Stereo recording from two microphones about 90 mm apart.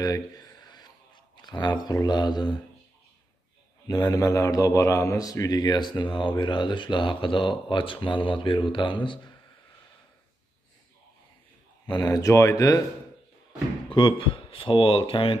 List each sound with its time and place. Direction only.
0.0 s a sound: 40° left (ahead or behind)
2.0 s mantra: 50° left (ahead or behind)
3.8 s a man's voice: 45° left (ahead or behind); by 9.3 s 65° left (ahead or behind)
11.8 s a man's voice: 50° left (ahead or behind)
13.8 s speech: 70° left (ahead or behind)